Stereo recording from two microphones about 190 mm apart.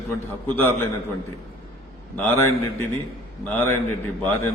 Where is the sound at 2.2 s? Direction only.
10° left (ahead or behind).